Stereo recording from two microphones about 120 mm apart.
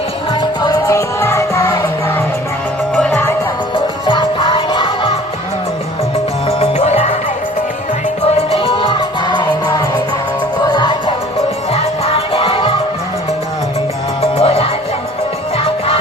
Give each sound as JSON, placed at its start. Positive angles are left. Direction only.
{"t": 0.6, "sound": "music", "side_deg": 30}
{"t": 2.9, "sound": "music", "side_deg": 0}
{"t": 4.0, "sound": "music", "side_deg": 40}
{"t": 6.6, "sound": "music", "side_deg": 65}
{"t": 8.4, "sound": "music", "side_deg": 50}
{"t": 11.7, "sound": "music", "side_deg": 55}
{"t": 14.2, "sound": "music", "side_deg": 55}